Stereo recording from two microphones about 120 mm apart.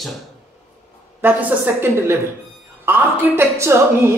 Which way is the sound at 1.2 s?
15° right (ahead or behind).